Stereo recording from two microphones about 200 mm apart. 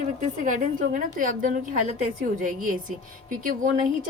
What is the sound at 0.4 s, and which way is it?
A woman's voice, 40° right (ahead or behind).